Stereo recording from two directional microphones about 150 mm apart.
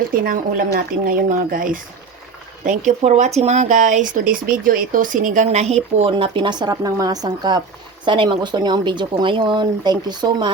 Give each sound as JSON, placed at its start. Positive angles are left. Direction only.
{"t": 0.1, "sound": "speech", "side_deg": -70}
{"t": 2.6, "sound": "speech", "side_deg": -50}